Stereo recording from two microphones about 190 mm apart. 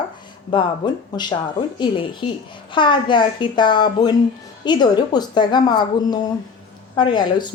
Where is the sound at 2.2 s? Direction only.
30° left (ahead or behind).